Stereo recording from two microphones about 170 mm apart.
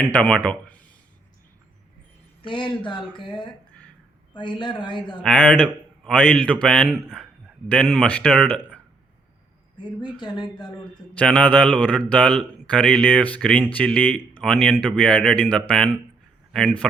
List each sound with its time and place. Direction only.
0.1 s a man's voice: 5° left (ahead or behind)
2.5 s speech: 30° left (ahead or behind)
4.6 s speech: 30° left (ahead or behind)
5.2 s a man's voice: 10° left (ahead or behind)
10.0 s speech: 25° left (ahead or behind)
11.2 s a man's voice: 5° left (ahead or behind)